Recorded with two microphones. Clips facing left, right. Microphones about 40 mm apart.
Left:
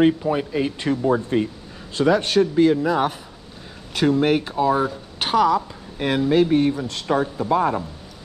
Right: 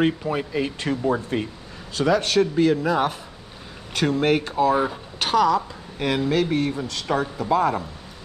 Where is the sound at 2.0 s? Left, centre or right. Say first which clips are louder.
Left 2 dB; left.